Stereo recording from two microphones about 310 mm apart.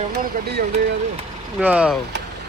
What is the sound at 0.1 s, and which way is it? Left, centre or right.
Speech, right.